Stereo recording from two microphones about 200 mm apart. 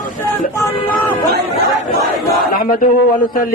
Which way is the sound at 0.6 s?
10° left (ahead or behind).